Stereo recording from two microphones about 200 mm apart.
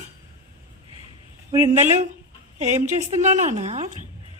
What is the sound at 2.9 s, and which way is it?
A woman's voice, 35° right (ahead or behind).